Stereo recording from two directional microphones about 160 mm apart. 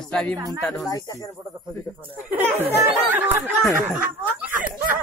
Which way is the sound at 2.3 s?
10° right (ahead or behind).